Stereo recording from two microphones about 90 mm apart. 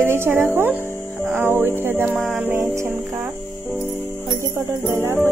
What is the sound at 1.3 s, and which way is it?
Music, 25° right (ahead or behind).